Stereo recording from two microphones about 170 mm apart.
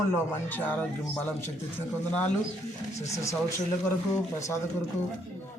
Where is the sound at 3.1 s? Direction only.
15° left (ahead or behind).